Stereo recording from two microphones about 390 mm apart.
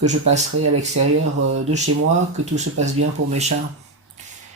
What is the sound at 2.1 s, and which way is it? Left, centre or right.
Speech, centre.